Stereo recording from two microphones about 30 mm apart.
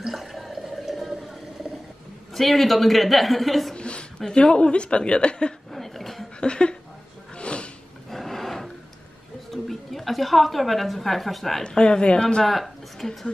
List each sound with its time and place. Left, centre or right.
0.0 s a sound: centre
2.3 s a woman's voice: centre
3.7 s a sound: left
4.3 s a woman's voice: left
5.7 s a sound: centre
6.4 s a woman's voice: left
7.3 s a sound: left
8.1 s roar: centre
9.5 s a woman's voice: centre
11.6 s a woman's voice: left
12.2 s speech: left
12.4 s a woman's voice: centre